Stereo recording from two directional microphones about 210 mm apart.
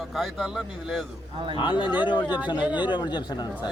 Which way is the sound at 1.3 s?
25° right (ahead or behind).